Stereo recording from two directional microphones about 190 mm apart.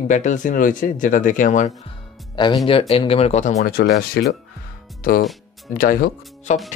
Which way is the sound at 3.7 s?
55° left (ahead or behind).